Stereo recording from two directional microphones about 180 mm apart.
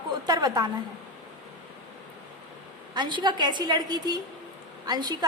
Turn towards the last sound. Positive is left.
turn(degrees=-20)  # may be behind; listen again after turning